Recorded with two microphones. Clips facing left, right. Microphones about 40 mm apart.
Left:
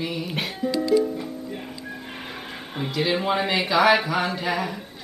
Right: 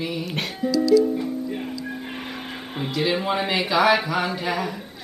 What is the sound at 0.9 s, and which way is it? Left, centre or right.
Music, left.